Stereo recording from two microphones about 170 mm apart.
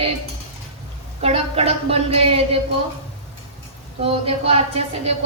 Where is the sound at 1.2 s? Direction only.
35° right (ahead or behind).